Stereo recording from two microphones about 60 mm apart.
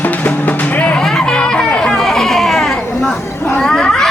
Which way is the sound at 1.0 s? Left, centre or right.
Centre.